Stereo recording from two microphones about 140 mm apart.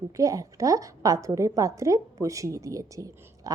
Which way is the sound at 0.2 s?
25° right (ahead or behind).